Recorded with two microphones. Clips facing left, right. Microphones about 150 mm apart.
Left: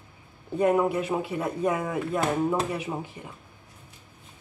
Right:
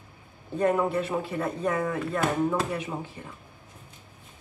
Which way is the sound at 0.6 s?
10° left (ahead or behind).